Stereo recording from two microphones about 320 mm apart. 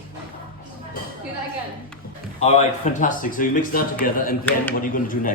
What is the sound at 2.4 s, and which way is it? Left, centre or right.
Speech, centre.